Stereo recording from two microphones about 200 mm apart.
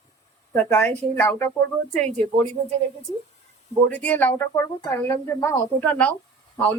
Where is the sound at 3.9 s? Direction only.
10° left (ahead or behind).